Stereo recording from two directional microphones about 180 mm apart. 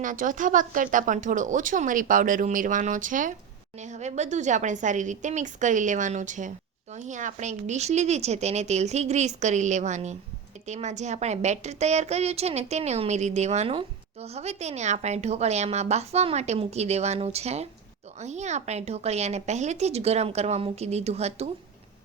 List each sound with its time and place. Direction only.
0.0 s a woman's voice: 45° right (ahead or behind)